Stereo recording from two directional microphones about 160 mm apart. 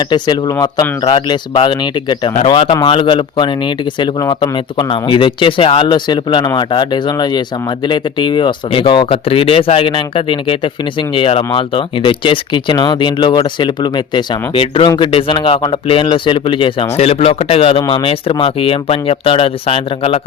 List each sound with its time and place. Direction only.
0.1 s speech: 30° left (ahead or behind)